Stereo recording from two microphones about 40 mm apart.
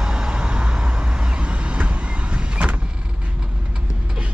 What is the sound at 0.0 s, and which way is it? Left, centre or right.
Vehicle, centre.